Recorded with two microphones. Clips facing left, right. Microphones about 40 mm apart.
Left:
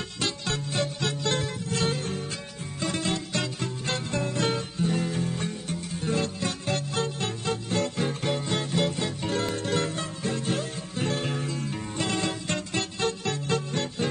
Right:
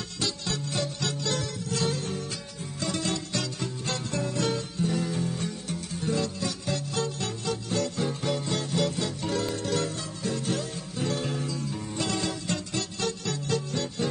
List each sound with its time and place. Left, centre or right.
0.2 s music: left